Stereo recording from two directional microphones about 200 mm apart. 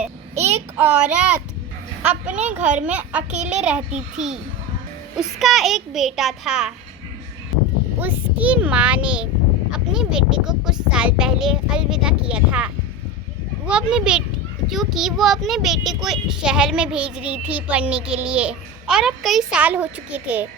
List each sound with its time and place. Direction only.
0.3 s child singing: 30° right (ahead or behind)
0.8 s a child's voice: 5° right (ahead or behind)
2.6 s a child's voice: 35° right (ahead or behind)
2.8 s a child's voice: 5° right (ahead or behind)
7.9 s a child's voice: 10° right (ahead or behind)